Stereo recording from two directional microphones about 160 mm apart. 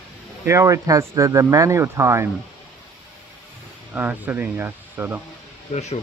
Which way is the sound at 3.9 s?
10° right (ahead or behind).